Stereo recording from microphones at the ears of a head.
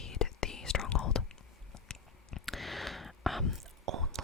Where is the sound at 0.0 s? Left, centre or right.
Left.